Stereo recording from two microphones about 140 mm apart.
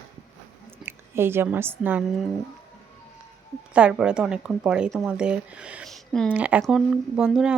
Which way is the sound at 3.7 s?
5° right (ahead or behind).